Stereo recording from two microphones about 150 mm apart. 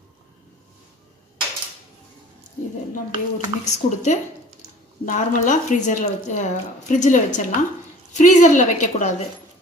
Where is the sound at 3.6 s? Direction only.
50° left (ahead or behind).